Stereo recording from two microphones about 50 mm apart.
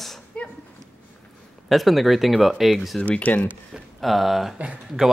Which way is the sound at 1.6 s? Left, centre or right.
Centre.